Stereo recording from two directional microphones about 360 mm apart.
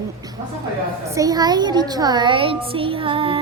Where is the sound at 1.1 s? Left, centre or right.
Centre.